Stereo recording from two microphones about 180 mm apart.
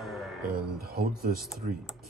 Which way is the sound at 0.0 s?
Centre (ahead or behind).